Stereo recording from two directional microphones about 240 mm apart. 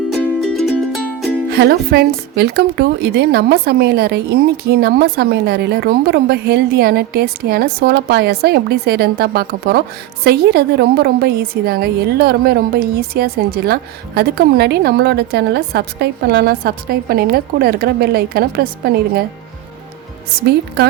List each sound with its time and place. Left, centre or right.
0.1 s music: centre
1.5 s speech: right